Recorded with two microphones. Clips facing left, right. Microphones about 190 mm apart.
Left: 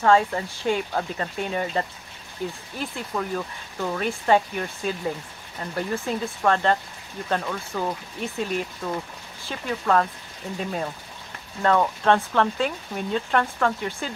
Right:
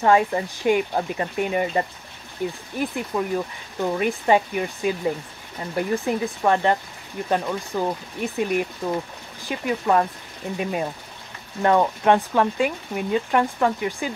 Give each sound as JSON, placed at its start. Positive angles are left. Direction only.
{"t": 0.0, "sound": "speech", "side_deg": -20}